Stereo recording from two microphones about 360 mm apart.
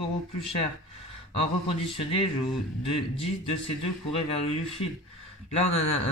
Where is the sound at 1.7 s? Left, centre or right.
Centre.